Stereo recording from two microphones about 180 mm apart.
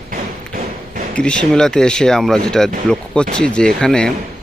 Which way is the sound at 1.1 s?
5° left (ahead or behind).